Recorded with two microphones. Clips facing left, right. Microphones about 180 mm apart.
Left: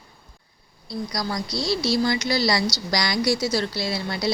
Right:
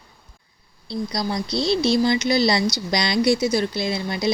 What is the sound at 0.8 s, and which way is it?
Speech, 25° right (ahead or behind).